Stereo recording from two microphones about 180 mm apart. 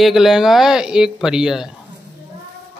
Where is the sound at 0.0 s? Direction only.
Centre (ahead or behind).